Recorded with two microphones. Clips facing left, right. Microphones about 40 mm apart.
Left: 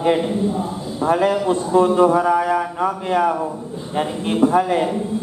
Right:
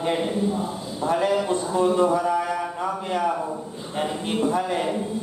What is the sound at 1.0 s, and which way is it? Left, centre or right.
Speech, left.